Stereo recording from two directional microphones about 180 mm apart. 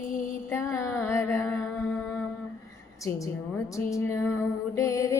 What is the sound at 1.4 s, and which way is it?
Music, 10° left (ahead or behind).